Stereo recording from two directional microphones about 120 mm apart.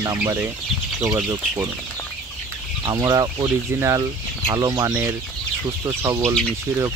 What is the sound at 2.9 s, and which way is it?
Speech, 30° right (ahead or behind).